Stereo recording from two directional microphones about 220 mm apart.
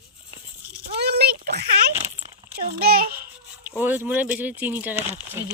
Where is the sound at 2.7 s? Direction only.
40° right (ahead or behind).